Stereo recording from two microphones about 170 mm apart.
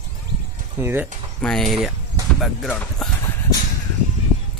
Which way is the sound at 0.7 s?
15° right (ahead or behind).